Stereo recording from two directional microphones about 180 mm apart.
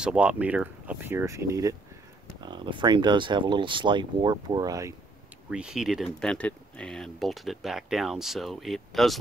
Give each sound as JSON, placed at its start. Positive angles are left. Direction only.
{"t": 0.0, "sound": "speech", "side_deg": -5}
{"t": 5.5, "sound": "speech", "side_deg": -5}